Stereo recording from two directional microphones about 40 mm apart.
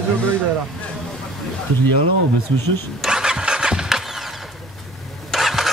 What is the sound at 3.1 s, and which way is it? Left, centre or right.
Engine starting, centre.